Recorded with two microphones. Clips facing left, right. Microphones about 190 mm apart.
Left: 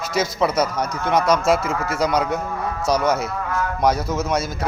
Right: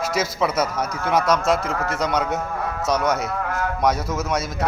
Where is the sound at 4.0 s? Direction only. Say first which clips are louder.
Left 2 dB; 25° left (ahead or behind).